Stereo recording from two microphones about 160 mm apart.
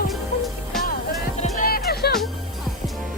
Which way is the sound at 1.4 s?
60° left (ahead or behind).